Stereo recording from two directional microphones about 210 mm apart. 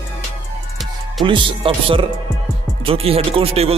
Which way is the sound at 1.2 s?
25° right (ahead or behind).